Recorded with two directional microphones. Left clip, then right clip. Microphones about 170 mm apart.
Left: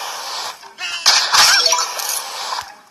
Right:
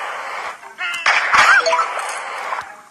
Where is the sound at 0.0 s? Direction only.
45° left (ahead or behind).